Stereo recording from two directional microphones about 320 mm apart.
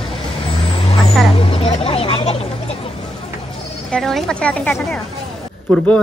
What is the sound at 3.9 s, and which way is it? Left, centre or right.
A man's voice, centre.